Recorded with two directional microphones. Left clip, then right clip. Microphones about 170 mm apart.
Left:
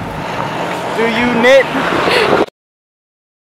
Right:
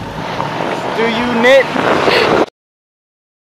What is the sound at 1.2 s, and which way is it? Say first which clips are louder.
Speech: even; 50° left (ahead or behind).